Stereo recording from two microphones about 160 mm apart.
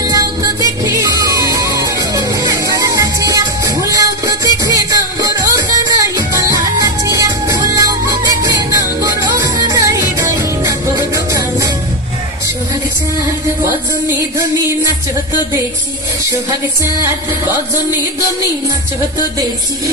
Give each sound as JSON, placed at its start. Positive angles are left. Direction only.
{"t": 0.0, "sound": "music", "side_deg": -20}
{"t": 1.5, "sound": "music", "side_deg": -20}